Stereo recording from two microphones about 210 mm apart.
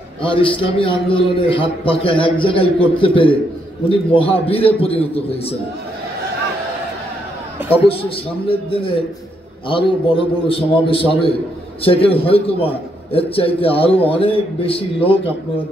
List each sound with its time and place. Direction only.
0.2 s a man's voice: 25° left (ahead or behind)
7.7 s a man's voice: 25° left (ahead or behind)